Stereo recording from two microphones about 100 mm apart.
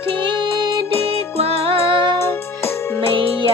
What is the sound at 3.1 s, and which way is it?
Music, 60° right (ahead or behind).